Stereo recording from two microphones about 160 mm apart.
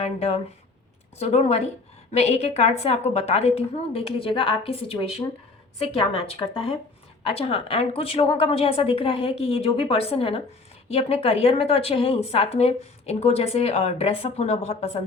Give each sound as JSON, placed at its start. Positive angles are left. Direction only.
{"t": 0.0, "sound": "a woman's voice", "side_deg": 40}